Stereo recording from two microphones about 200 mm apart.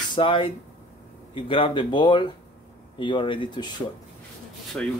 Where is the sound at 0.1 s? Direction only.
25° left (ahead or behind).